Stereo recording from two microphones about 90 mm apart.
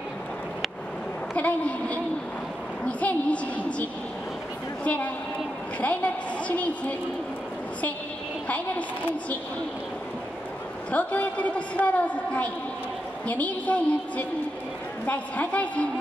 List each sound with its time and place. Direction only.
1.3 s a man's voice: 15° left (ahead or behind)
4.8 s a man's voice: 15° left (ahead or behind)
8.5 s a man's voice: 15° left (ahead or behind)
10.9 s a man's voice: 15° left (ahead or behind)